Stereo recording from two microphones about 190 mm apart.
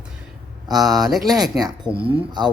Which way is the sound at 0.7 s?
Centre (ahead or behind).